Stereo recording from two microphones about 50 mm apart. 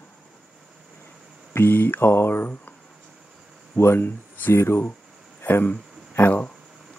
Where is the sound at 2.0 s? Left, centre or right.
Left.